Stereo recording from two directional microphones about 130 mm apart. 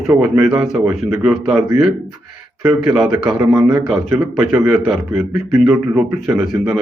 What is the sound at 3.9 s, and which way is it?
Speech, 15° right (ahead or behind).